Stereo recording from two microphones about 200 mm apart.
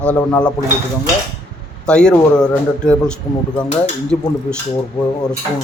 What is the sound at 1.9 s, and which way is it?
A man's voice, 5° left (ahead or behind).